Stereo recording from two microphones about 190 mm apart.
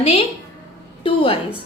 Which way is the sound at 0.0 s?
35° left (ahead or behind).